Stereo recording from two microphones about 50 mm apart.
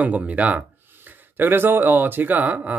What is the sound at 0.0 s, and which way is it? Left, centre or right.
Speech, right.